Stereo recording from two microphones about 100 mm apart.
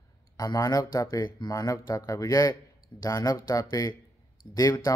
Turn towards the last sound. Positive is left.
turn(degrees=35)  # may be behind; listen again after turning